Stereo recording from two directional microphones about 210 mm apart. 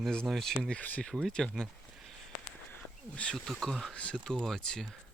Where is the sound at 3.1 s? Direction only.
5° left (ahead or behind).